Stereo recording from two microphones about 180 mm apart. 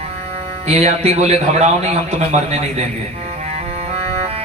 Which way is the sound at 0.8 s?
35° right (ahead or behind).